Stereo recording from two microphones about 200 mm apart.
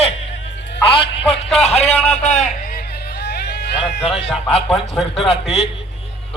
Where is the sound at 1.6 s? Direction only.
30° left (ahead or behind); by 4.0 s 55° left (ahead or behind).